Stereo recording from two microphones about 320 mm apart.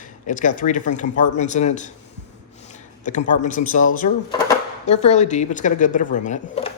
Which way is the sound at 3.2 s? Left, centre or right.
Left.